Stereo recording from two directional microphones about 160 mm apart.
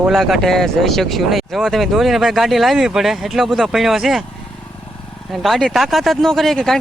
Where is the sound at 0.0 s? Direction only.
Centre (ahead or behind).